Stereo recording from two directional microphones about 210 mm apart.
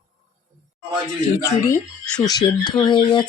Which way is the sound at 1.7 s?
20° left (ahead or behind).